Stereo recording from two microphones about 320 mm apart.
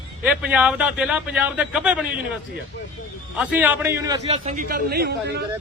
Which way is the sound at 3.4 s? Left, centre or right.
Centre.